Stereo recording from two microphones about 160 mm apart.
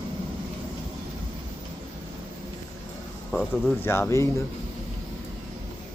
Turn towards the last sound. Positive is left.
turn(degrees=15)  # may be behind; listen again after turning